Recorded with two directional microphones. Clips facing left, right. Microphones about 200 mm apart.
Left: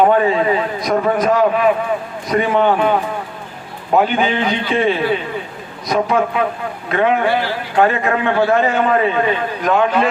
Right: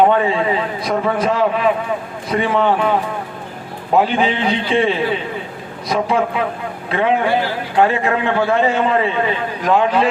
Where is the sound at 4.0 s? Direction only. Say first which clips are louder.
Even; 30° right (ahead or behind).